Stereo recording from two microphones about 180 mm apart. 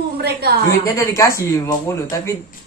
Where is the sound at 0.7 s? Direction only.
15° left (ahead or behind).